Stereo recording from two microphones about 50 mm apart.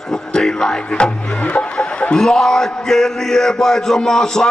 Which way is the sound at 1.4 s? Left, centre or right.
Left.